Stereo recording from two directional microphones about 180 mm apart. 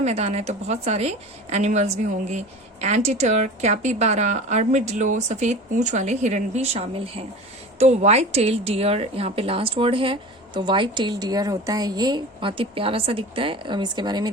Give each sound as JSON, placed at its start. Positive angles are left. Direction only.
{"t": 0.0, "sound": "a woman's voice", "side_deg": -35}